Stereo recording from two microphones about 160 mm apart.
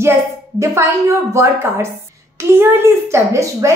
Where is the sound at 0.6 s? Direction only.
15° right (ahead or behind).